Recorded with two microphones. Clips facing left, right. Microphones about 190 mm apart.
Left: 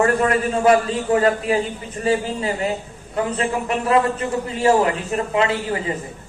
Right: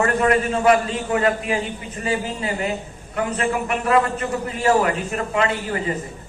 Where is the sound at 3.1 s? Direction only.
30° left (ahead or behind).